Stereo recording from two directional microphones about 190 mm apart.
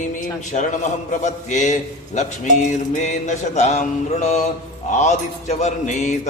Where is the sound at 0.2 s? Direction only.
40° left (ahead or behind).